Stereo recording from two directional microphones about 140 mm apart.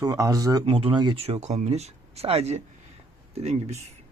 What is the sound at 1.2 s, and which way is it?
Speech, 45° right (ahead or behind).